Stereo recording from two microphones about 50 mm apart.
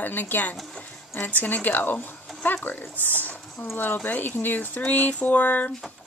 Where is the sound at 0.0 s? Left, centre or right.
Left.